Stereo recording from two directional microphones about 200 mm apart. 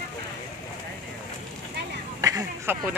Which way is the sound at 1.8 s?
55° right (ahead or behind).